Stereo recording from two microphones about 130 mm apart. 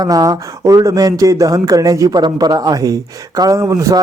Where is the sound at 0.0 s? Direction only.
25° right (ahead or behind).